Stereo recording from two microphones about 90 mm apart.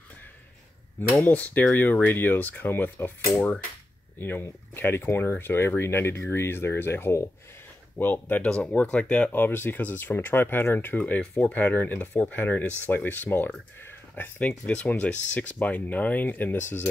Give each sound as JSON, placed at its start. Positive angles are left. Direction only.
{"t": 1.1, "sound": "speech", "side_deg": 15}
{"t": 4.2, "sound": "speech", "side_deg": 25}
{"t": 9.3, "sound": "speech", "side_deg": 25}